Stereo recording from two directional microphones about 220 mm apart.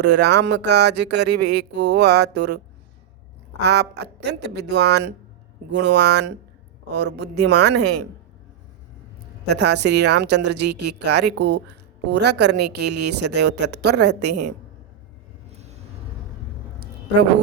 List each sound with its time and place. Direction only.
0.0 s a woman's voice: 50° right (ahead or behind)
3.7 s a woman's voice: 50° right (ahead or behind)
9.5 s a woman's voice: 50° right (ahead or behind)
15.5 s a sound: 30° right (ahead or behind)